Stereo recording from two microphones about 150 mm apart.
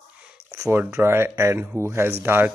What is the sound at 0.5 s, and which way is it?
Speech, 20° right (ahead or behind).